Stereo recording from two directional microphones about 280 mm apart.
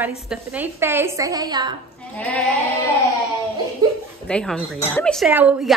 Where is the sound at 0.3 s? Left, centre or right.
Centre.